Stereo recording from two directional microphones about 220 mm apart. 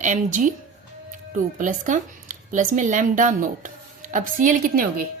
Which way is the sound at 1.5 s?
35° right (ahead or behind).